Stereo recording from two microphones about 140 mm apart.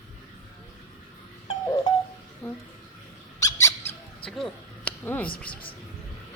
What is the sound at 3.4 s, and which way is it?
Squeak, 20° left (ahead or behind).